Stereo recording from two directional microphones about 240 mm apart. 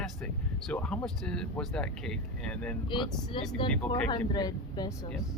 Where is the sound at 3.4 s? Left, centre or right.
Centre.